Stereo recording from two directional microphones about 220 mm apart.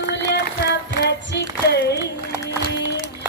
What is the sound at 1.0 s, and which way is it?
Female singing, 50° left (ahead or behind).